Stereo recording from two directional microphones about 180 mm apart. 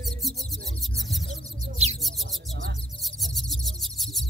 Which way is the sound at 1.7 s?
35° right (ahead or behind).